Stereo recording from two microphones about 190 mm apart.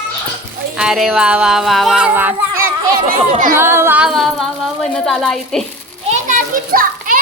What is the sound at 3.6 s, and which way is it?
Music, 10° right (ahead or behind).